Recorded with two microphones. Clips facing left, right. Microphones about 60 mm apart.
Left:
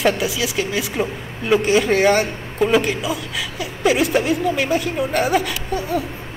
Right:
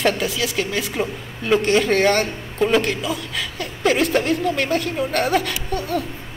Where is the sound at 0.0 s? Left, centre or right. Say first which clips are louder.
Left 1 dB; centre.